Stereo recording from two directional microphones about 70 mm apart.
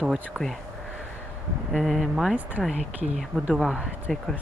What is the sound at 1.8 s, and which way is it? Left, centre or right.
Speech, centre.